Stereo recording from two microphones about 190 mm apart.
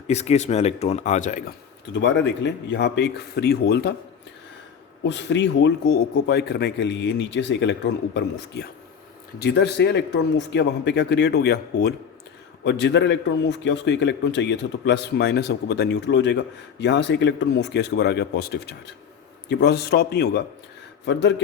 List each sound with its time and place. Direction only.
0.1 s speech: 35° left (ahead or behind)
1.9 s a man's voice: 65° left (ahead or behind)
5.0 s a man's voice: 70° left (ahead or behind)